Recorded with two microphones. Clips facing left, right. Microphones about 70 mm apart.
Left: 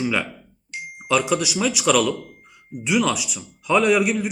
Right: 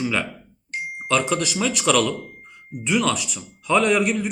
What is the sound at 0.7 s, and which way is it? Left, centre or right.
Music, right.